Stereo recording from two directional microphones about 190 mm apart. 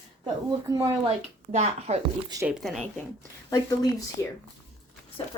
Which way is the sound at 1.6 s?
35° right (ahead or behind).